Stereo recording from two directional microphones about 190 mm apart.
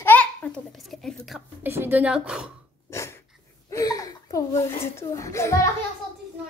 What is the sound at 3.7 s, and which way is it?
A child's voice, 20° left (ahead or behind).